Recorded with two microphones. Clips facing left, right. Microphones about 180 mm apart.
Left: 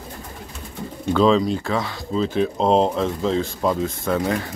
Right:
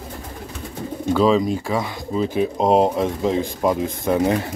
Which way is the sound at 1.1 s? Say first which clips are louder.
Even; 5° right (ahead or behind).